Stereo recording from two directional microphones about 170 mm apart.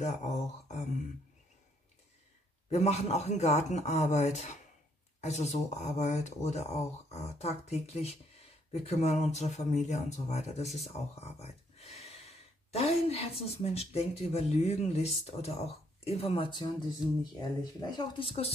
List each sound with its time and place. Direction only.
0.0 s mantra: 45° left (ahead or behind)
2.7 s a woman's voice: 40° left (ahead or behind)
11.1 s a sound: 35° left (ahead or behind)
12.7 s a woman's voice: 35° left (ahead or behind)